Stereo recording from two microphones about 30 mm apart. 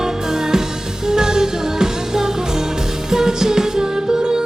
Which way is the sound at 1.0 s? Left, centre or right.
Right.